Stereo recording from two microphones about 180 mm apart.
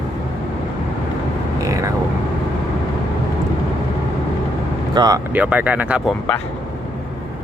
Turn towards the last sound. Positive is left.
turn(degrees=-5)  # may be behind; listen again after turning